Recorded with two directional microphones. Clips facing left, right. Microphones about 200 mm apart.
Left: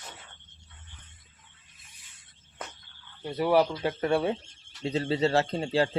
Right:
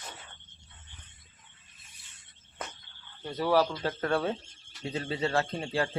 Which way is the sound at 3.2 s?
10° left (ahead or behind).